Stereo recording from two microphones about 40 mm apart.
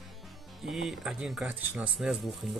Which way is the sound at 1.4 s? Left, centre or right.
Right.